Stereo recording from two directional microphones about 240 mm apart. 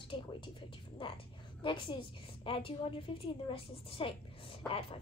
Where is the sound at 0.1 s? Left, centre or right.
Centre.